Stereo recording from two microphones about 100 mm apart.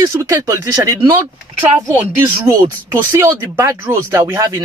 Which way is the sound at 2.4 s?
25° right (ahead or behind).